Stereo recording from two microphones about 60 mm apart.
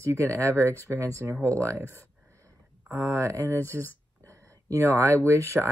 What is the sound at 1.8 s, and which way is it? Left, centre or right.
Speech, left.